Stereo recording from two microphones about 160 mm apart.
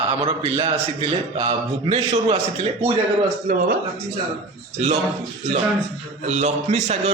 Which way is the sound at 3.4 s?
60° right (ahead or behind).